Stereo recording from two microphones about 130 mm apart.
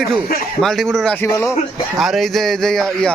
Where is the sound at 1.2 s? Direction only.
20° left (ahead or behind).